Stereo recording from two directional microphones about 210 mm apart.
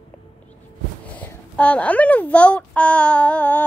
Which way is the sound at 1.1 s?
5° left (ahead or behind).